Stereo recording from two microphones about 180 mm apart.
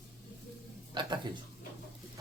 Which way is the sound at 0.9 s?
25° right (ahead or behind).